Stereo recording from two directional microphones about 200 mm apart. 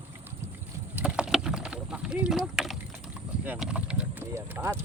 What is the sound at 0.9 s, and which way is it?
Rowboat, 5° right (ahead or behind).